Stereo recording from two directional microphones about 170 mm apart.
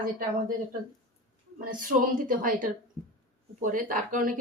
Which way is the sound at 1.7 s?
55° right (ahead or behind).